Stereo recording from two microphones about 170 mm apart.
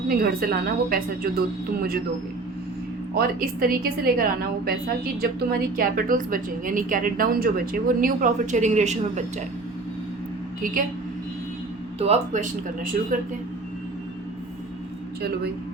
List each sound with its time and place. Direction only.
0.2 s a woman's voice: 60° right (ahead or behind)
3.2 s a woman's voice: 60° right (ahead or behind)
11.9 s speech: 40° right (ahead or behind)